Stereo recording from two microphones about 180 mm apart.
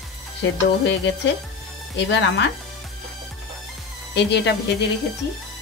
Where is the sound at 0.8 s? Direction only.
80° left.